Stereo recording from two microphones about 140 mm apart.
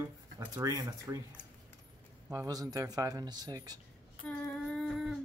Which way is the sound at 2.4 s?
25° right (ahead or behind).